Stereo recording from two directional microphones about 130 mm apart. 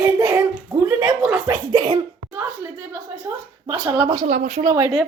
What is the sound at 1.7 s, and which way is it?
Speech, 40° right (ahead or behind).